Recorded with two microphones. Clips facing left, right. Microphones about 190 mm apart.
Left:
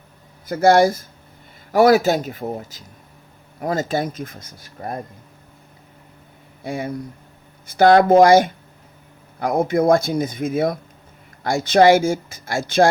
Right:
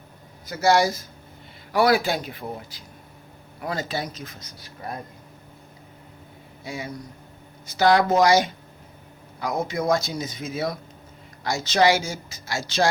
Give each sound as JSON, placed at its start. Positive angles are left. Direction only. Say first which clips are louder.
{"t": 0.4, "sound": "speech", "louder": "left 6 dB", "side_deg": 55}
{"t": 6.7, "sound": "speech", "louder": "left 7 dB", "side_deg": 55}